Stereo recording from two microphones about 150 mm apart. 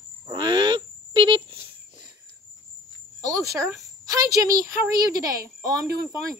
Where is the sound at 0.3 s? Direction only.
30° right (ahead or behind).